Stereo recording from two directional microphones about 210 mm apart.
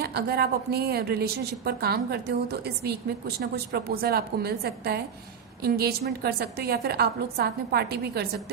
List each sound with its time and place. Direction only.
0.0 s a woman's voice: 50° right (ahead or behind)